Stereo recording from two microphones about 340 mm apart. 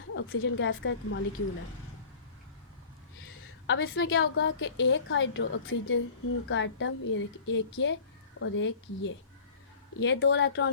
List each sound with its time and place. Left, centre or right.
0.1 s a woman's voice: left
3.7 s a woman's voice: left